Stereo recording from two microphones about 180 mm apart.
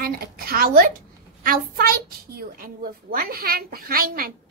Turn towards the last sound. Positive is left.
turn(degrees=-55)  # may be behind; listen again after turning